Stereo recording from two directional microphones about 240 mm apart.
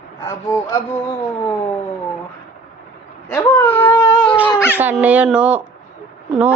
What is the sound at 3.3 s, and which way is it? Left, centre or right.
Speech, centre.